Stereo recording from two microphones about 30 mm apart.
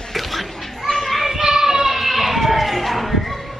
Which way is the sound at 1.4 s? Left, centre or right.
Centre.